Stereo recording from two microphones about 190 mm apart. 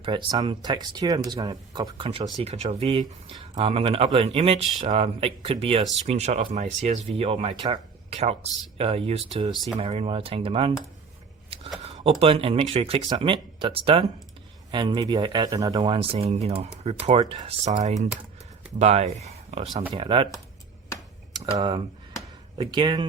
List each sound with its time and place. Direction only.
0.0 s speech: 25° right (ahead or behind)
11.5 s a sound: 30° right (ahead or behind)
12.2 s speech: 30° right (ahead or behind)
21.3 s speech: 25° right (ahead or behind)